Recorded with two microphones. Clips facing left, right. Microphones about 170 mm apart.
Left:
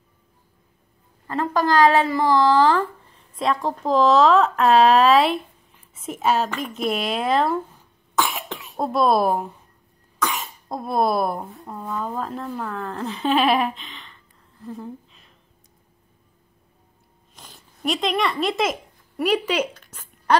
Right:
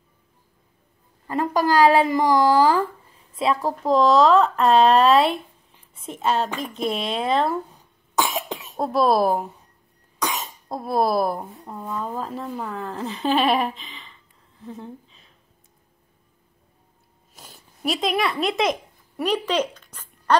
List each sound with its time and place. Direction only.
1.2 s a woman's voice: 15° right (ahead or behind); by 7.5 s centre (ahead or behind)
8.2 s cough: 20° right (ahead or behind)
8.7 s speech: centre (ahead or behind)
10.7 s speech: centre (ahead or behind)
17.3 s a sound: 5° right (ahead or behind)